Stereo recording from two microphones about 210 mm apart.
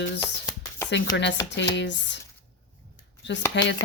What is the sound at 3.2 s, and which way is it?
Speech, 60° left (ahead or behind).